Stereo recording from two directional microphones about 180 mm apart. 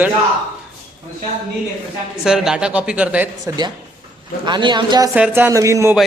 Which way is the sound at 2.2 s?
5° right (ahead or behind).